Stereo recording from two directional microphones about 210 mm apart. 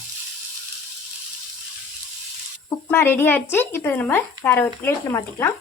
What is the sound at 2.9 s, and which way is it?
A woman's voice, 10° left (ahead or behind).